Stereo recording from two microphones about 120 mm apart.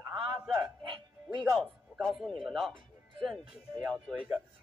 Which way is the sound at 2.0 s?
Centre (ahead or behind).